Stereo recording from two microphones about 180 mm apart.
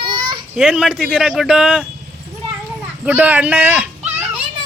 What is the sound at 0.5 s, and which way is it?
Speech, centre (ahead or behind).